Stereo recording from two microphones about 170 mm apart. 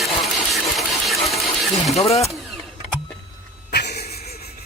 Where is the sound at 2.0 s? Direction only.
35° left (ahead or behind).